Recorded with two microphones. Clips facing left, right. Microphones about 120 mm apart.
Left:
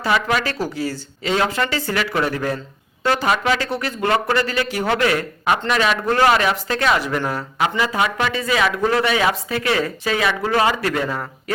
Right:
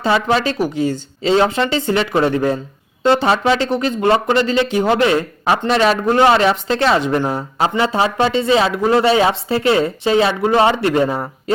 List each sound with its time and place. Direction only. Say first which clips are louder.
0.0 s a man's voice: right 4 dB; 30° right (ahead or behind)